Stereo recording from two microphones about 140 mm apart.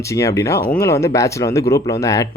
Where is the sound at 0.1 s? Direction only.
20° left (ahead or behind).